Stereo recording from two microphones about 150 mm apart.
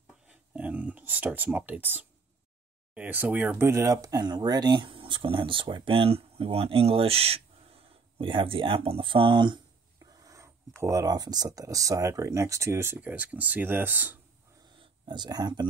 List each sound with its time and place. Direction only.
0.3 s speech: 10° right (ahead or behind); by 9.6 s 30° right (ahead or behind)
10.2 s a sound: 20° right (ahead or behind)
10.8 s speech: 20° right (ahead or behind)
14.8 s speech: 30° right (ahead or behind)